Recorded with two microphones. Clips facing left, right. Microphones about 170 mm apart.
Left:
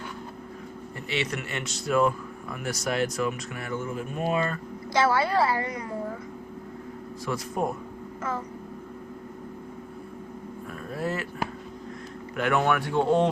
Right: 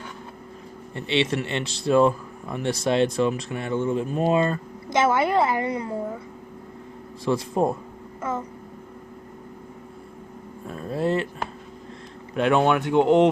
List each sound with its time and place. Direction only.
0.9 s speech: 25° right (ahead or behind)
7.3 s speech: 25° right (ahead or behind)
10.7 s a sound: 25° right (ahead or behind)
12.4 s speech: 25° right (ahead or behind)